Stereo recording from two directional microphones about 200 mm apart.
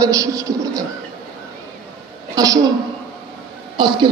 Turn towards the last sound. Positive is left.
turn(degrees=-25)  # may be behind; listen again after turning